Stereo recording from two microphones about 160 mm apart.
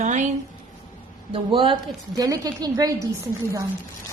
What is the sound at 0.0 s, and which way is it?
Speech, 50° right (ahead or behind).